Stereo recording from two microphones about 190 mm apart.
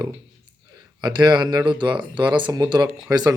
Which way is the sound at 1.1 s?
20° right (ahead or behind).